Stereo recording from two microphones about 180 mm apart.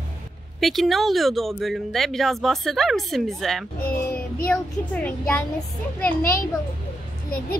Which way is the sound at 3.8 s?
55° left (ahead or behind).